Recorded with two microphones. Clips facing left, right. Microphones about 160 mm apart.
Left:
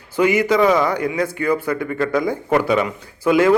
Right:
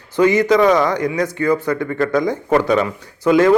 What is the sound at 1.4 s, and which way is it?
Speech, 10° left (ahead or behind).